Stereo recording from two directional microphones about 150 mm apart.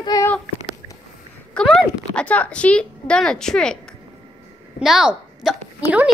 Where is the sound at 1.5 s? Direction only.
Centre (ahead or behind).